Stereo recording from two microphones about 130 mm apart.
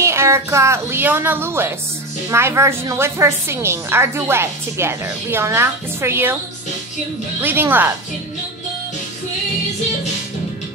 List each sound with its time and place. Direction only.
0.0 s a woman's voice: 20° right (ahead or behind)
7.4 s speech: 15° right (ahead or behind)